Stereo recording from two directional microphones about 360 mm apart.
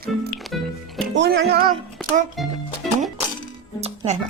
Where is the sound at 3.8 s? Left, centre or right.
Centre.